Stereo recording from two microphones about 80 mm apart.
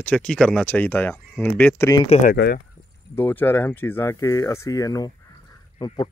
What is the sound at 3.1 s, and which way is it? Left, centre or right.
Speech, left.